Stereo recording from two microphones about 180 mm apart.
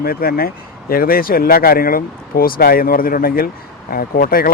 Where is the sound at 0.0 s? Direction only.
55° left (ahead or behind).